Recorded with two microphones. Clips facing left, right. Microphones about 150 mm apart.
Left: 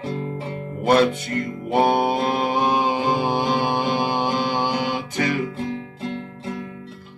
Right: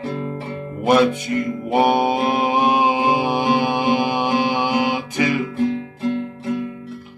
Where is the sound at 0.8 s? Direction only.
15° right (ahead or behind).